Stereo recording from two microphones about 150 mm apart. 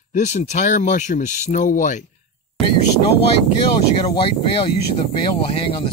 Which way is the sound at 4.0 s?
40° left (ahead or behind).